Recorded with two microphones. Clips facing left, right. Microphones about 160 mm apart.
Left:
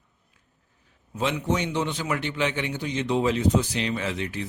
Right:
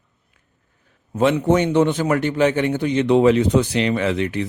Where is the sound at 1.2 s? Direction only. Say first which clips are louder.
Right 9 dB; 55° right (ahead or behind).